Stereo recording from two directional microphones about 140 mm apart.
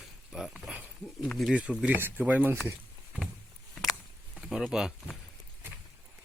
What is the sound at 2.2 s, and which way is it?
Speech, 10° right (ahead or behind).